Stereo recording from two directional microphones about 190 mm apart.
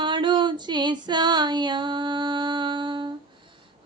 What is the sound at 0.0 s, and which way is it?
Female singing, 25° right (ahead or behind).